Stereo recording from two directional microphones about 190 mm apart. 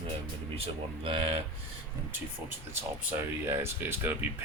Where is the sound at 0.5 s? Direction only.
30° right (ahead or behind).